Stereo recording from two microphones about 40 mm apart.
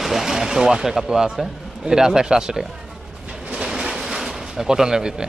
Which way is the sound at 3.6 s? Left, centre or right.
Centre.